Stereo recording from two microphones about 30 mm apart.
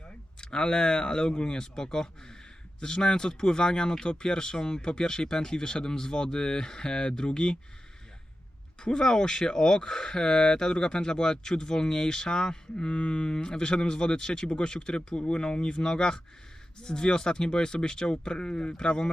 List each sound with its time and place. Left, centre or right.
0.4 s speech: left
8.8 s speech: left